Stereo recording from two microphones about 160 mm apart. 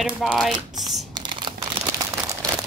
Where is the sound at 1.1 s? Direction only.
30° right (ahead or behind).